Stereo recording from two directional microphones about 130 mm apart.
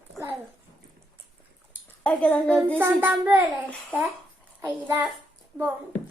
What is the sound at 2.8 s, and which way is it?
Child singing, 15° right (ahead or behind).